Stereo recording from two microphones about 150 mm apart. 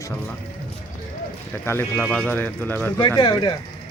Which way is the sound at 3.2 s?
30° left (ahead or behind).